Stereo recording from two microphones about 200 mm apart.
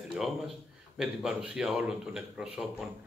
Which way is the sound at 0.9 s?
Centre (ahead or behind).